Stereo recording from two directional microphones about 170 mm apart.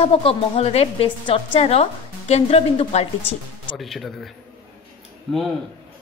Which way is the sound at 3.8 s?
Centre (ahead or behind).